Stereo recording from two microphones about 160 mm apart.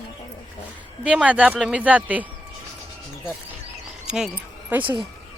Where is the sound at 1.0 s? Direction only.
10° right (ahead or behind).